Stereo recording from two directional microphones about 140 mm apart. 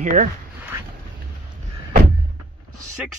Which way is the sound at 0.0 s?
65° right (ahead or behind).